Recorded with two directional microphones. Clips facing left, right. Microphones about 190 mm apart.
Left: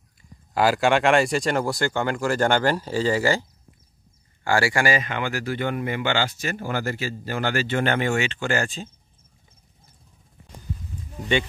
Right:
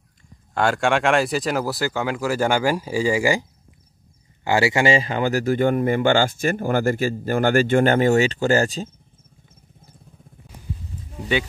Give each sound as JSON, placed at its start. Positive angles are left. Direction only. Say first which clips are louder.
{"t": 0.6, "sound": "speech", "louder": "even", "side_deg": 5}
{"t": 4.5, "sound": "speech", "louder": "right 3 dB", "side_deg": -20}
{"t": 11.1, "sound": "speech", "louder": "even", "side_deg": -5}